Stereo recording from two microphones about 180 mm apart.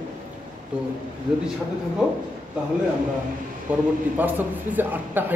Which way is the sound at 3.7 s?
10° right (ahead or behind).